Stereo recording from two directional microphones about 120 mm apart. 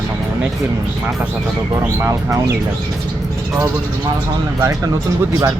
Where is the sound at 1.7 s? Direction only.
25° right (ahead or behind).